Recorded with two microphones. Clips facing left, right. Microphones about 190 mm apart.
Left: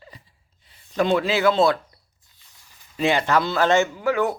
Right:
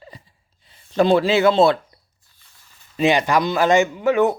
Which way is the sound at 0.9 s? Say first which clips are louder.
Right 5 dB; 30° right (ahead or behind).